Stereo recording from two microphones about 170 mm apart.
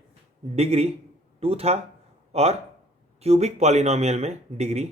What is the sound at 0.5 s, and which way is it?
Speech, 40° right (ahead or behind).